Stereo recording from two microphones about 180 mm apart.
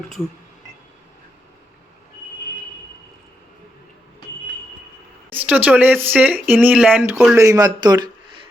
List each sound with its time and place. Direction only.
5.3 s a man's voice: 10° right (ahead or behind)